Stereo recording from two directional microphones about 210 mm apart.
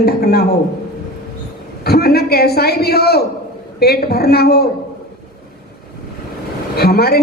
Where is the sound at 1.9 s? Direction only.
50° left (ahead or behind).